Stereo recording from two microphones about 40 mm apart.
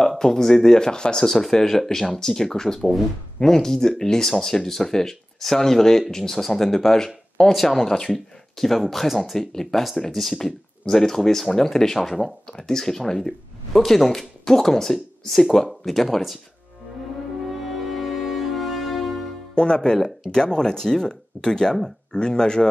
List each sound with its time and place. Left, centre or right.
0.2 s speech: centre
9.4 s speech: centre
12.4 s speech: centre
17.5 s music: centre
19.5 s speech: left